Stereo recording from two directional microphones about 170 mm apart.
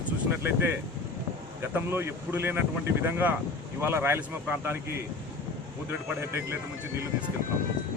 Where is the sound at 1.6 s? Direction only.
15° right (ahead or behind).